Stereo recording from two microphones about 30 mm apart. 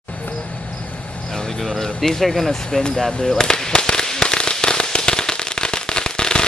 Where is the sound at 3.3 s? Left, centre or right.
Left.